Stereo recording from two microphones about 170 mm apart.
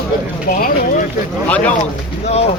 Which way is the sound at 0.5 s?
50° left (ahead or behind).